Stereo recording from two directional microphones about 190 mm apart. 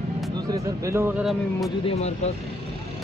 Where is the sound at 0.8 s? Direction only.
15° right (ahead or behind).